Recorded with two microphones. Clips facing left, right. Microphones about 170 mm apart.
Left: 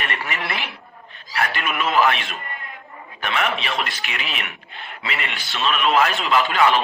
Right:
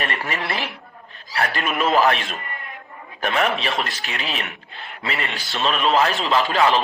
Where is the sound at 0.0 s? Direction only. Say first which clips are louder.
Right 2 dB; 40° right (ahead or behind).